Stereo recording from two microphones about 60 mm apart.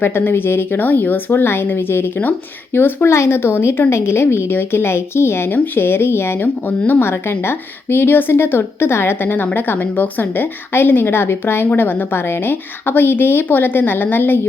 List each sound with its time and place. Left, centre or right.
0.0 s speech: left